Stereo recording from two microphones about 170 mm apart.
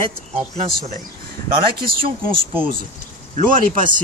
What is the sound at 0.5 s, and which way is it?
Speech, 40° right (ahead or behind).